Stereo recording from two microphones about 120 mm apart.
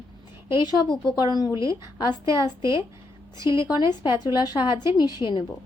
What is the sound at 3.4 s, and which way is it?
A woman's voice, 40° left (ahead or behind).